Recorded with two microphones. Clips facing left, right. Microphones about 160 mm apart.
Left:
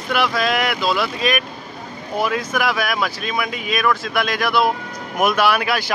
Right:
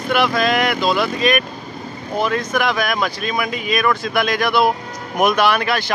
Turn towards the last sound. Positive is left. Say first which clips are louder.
# right 1 dB
turn(degrees=10)  # may be behind; listen again after turning